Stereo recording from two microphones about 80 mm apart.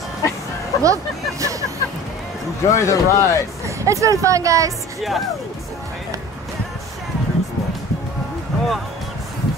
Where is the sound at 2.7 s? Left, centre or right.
Left.